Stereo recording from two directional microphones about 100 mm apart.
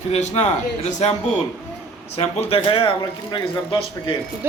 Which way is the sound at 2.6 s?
60° left (ahead or behind).